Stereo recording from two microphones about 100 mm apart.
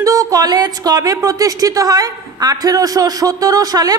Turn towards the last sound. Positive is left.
turn(degrees=-40)  # may be behind; listen again after turning